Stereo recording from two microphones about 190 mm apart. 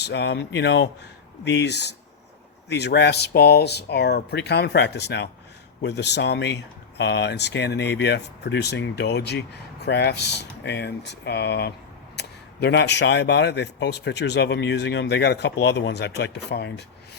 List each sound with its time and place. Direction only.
0.0 s speech: 65° left (ahead or behind)